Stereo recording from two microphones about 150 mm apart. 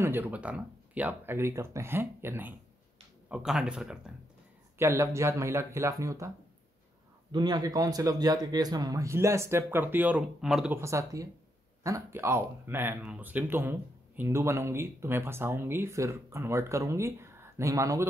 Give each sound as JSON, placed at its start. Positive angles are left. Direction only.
{"t": 0.0, "sound": "speech", "side_deg": -15}
{"t": 4.7, "sound": "speech", "side_deg": -20}
{"t": 7.3, "sound": "speech", "side_deg": -25}
{"t": 10.7, "sound": "speech", "side_deg": -20}